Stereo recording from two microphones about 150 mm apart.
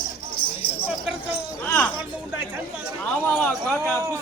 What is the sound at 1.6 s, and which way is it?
Speech, 10° left (ahead or behind).